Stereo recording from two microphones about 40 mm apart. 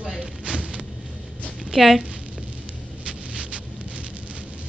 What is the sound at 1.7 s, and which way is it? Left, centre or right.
Speech, centre.